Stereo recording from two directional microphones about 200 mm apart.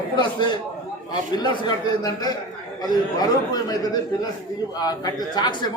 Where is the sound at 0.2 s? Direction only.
20° left (ahead or behind).